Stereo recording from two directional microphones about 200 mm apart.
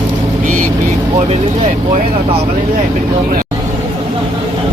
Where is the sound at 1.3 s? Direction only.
35° right (ahead or behind).